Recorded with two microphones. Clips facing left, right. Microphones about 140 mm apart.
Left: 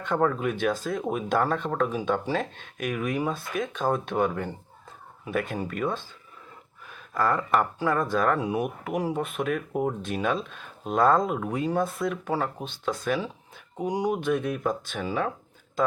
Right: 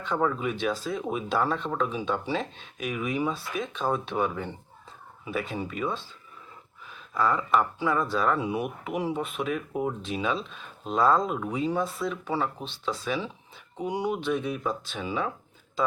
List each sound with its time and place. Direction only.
0.0 s speech: 55° left (ahead or behind)